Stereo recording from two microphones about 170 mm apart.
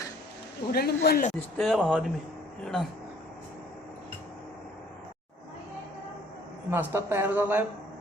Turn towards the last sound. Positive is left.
turn(degrees=-10)  # may be behind; listen again after turning